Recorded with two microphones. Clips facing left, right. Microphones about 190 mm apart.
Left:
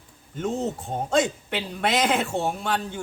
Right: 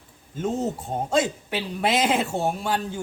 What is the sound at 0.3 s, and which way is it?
Speech, 5° right (ahead or behind).